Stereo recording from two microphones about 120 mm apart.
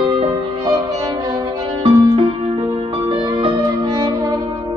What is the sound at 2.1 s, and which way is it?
Music, 45° right (ahead or behind).